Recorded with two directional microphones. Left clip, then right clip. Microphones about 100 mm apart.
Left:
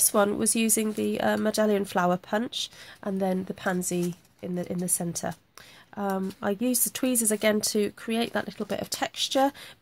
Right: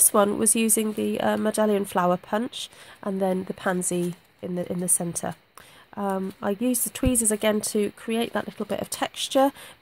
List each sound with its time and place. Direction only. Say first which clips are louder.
0.0 s speech: right 3 dB; 35° right (ahead or behind)
5.9 s speech: right 2 dB; 25° right (ahead or behind)